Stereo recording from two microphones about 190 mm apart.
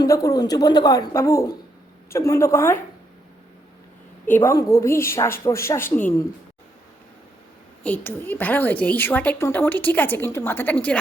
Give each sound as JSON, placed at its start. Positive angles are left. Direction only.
{"t": 0.0, "sound": "a woman's voice", "side_deg": 20}
{"t": 4.3, "sound": "a woman's voice", "side_deg": 15}
{"t": 7.9, "sound": "a woman's voice", "side_deg": 10}